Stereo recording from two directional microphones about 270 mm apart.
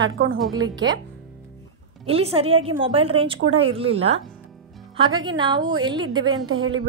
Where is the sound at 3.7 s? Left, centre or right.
Right.